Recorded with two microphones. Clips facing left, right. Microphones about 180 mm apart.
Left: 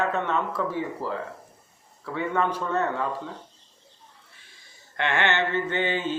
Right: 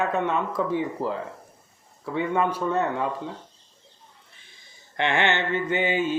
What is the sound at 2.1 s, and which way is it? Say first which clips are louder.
Mantra: right 2 dB; 15° right (ahead or behind).